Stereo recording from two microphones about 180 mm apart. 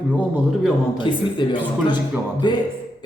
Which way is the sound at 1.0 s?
25° left (ahead or behind).